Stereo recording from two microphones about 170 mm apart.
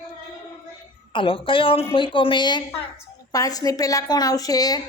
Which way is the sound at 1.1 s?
30° left (ahead or behind).